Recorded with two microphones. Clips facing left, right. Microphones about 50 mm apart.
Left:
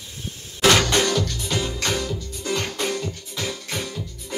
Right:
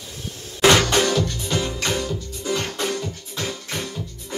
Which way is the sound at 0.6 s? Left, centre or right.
Right.